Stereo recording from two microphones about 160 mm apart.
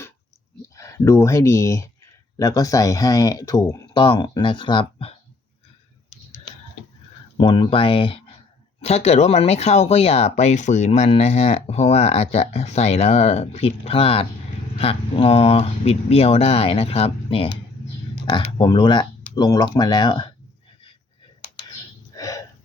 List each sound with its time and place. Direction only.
0.6 s speech: 20° left (ahead or behind); by 5.1 s 35° left (ahead or behind)
7.3 s speech: 30° left (ahead or behind)
22.1 s a sound: 20° left (ahead or behind)